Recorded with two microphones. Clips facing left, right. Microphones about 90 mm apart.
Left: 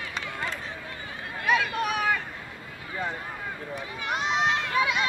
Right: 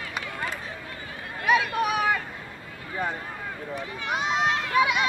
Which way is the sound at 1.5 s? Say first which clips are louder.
Right 2 dB; 15° right (ahead or behind).